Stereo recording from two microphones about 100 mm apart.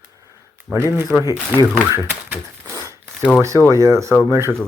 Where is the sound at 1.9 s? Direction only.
25° right (ahead or behind).